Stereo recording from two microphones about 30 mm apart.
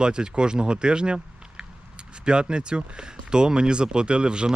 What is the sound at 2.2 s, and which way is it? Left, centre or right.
Speech, right.